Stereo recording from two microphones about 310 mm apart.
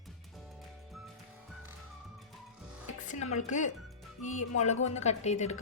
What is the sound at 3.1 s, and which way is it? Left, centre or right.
A woman's voice, left.